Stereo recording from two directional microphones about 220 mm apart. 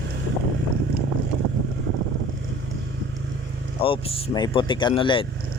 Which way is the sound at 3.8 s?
25° left (ahead or behind).